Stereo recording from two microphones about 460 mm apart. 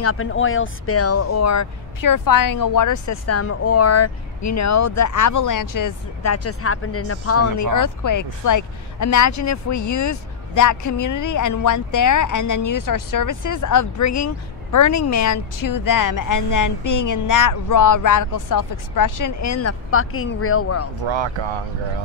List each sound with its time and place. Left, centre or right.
0.0 s speech: left
21.0 s speech: right